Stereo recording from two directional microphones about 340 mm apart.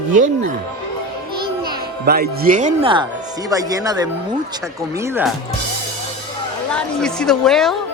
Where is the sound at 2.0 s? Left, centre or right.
Right; by 4.1 s centre.